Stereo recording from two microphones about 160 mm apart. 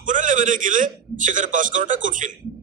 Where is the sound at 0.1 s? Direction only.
55° right (ahead or behind).